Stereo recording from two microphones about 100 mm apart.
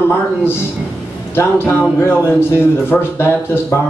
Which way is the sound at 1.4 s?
20° left (ahead or behind).